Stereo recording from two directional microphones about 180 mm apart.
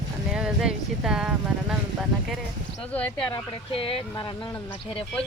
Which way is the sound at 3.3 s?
30° left (ahead or behind).